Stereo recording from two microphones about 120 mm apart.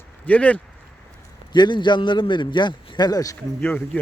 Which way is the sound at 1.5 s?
40° left (ahead or behind).